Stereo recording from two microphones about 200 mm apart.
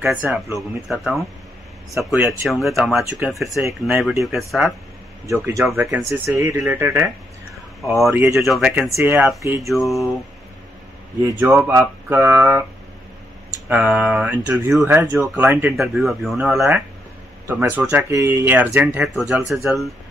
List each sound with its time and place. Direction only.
0.0 s speech: 5° right (ahead or behind)
5.2 s speech: 15° right (ahead or behind)
5.6 s speech: 5° right (ahead or behind)
11.3 s speech: 10° right (ahead or behind)
13.7 s speech: 5° right (ahead or behind)